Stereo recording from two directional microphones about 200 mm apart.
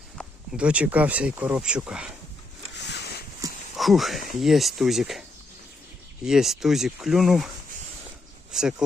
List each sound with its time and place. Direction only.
0.2 s speech: 5° right (ahead or behind)
2.8 s a sound: 55° left (ahead or behind)
3.8 s speech: centre (ahead or behind)
6.2 s speech: centre (ahead or behind)
8.5 s speech: 5° right (ahead or behind)